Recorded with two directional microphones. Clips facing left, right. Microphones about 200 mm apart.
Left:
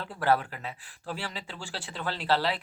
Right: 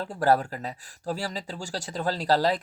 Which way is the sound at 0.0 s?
40° right (ahead or behind).